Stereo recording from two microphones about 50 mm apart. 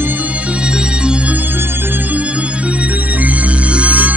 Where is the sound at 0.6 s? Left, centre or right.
Centre.